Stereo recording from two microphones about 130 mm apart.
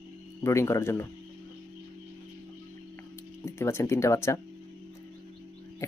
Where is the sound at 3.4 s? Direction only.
20° left (ahead or behind).